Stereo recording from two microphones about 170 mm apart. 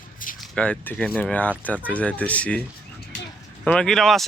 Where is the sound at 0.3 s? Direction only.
5° left (ahead or behind).